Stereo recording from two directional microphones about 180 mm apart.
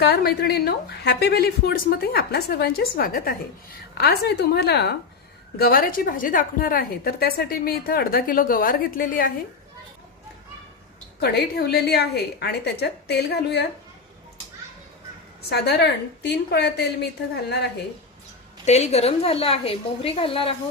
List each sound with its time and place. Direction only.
0.0 s a woman's voice: 65° left (ahead or behind)
3.9 s a woman's voice: 65° left (ahead or behind)
5.5 s a woman's voice: 55° left (ahead or behind)
11.2 s a woman's voice: 60° left (ahead or behind)
15.4 s a woman's voice: 65° left (ahead or behind)
18.6 s a woman's voice: 40° left (ahead or behind)